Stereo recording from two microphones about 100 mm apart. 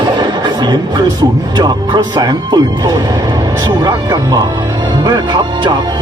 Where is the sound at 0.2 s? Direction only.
45° right (ahead or behind).